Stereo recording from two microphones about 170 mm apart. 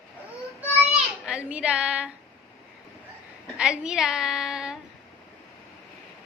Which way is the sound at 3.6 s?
5° right (ahead or behind).